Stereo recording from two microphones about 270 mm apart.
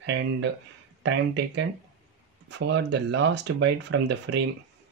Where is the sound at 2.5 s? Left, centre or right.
Right.